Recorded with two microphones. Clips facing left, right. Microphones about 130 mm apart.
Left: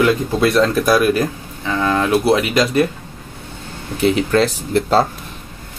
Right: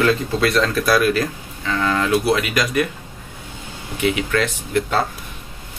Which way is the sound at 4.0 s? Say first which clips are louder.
Left 5 dB; 35° left (ahead or behind).